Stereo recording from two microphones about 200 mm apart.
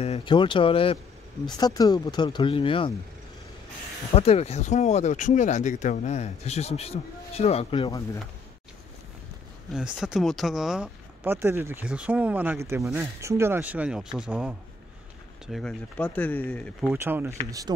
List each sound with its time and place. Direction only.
0.0 s speech: 25° left (ahead or behind)
4.1 s speech: 30° left (ahead or behind)
9.9 s speech: centre (ahead or behind)
16.9 s speech: 10° right (ahead or behind)